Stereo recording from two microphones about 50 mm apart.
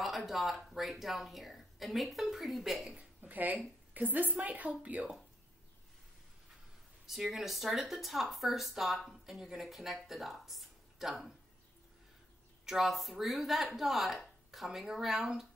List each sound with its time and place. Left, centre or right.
0.3 s speech: centre
3.0 s a woman's voice: right
7.1 s speech: centre
12.6 s speech: centre